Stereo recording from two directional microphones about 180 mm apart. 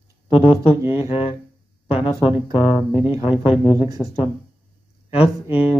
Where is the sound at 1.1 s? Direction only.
30° left (ahead or behind).